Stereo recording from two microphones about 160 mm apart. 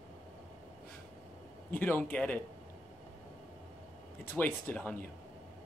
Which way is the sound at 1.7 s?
10° left (ahead or behind).